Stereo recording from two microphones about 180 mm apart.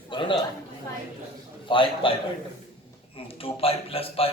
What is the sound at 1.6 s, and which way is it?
Speech, 30° left (ahead or behind).